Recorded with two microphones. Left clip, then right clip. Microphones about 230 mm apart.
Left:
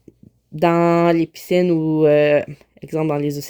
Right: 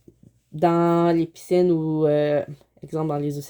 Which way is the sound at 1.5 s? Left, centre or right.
Left.